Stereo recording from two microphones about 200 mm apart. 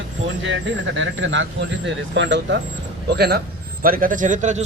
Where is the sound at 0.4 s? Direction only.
70° right (ahead or behind).